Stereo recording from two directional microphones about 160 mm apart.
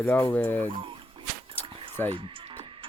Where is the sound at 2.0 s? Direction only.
15° left (ahead or behind).